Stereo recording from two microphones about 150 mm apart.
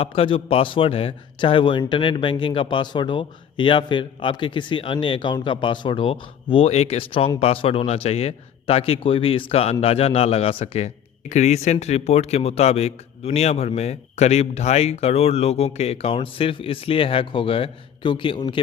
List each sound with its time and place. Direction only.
0.0 s a man's voice: 35° left (ahead or behind)